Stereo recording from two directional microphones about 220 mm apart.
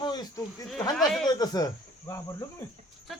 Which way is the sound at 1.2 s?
15° left (ahead or behind).